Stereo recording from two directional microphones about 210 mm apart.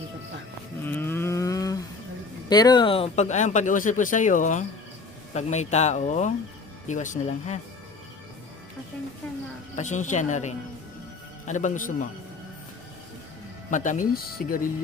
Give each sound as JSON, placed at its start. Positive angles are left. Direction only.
{"t": 0.9, "sound": "a sound", "side_deg": 10}
{"t": 2.5, "sound": "speech", "side_deg": 20}
{"t": 9.7, "sound": "speech", "side_deg": 35}
{"t": 13.7, "sound": "speech", "side_deg": 35}